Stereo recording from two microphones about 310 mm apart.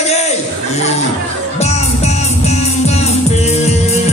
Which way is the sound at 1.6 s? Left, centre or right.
Left.